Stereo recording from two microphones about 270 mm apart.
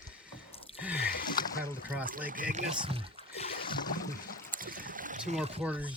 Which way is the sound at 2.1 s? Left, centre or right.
Right.